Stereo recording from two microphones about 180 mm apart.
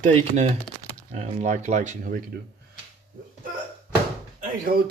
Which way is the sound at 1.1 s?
40° right (ahead or behind).